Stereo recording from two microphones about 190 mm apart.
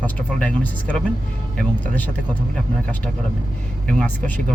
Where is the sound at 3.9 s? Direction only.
5° left (ahead or behind).